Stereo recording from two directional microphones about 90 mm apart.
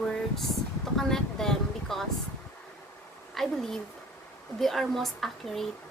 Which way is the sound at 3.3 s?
5° left (ahead or behind).